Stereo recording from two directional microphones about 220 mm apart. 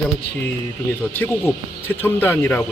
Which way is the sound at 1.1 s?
10° left (ahead or behind).